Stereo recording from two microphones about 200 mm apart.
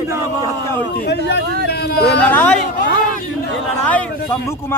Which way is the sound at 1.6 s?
50° left (ahead or behind).